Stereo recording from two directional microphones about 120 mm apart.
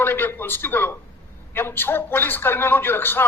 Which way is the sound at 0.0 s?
15° left (ahead or behind).